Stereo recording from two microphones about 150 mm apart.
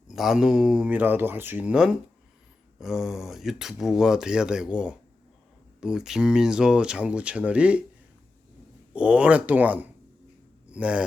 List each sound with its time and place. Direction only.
0.1 s speech: 5° right (ahead or behind)
8.9 s speech: 5° right (ahead or behind)